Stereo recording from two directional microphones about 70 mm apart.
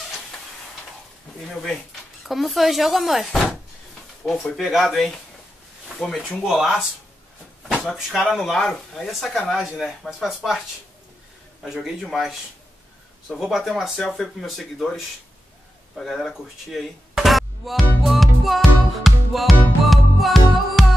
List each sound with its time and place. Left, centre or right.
1.5 s speech: centre
4.2 s speech: left
4.6 s speech: centre
6.4 s speech: centre
11.6 s speech: centre
13.4 s speech: centre
19.9 s music: centre